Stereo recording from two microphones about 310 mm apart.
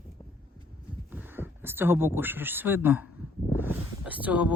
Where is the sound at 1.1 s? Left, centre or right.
Centre.